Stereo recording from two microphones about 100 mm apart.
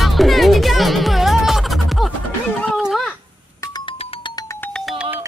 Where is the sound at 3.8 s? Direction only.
65° left (ahead or behind).